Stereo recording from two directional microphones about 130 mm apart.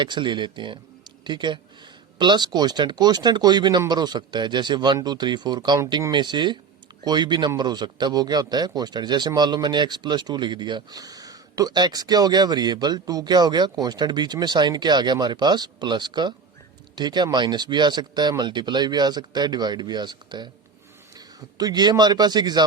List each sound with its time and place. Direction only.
0.0 s a man's voice: 35° right (ahead or behind)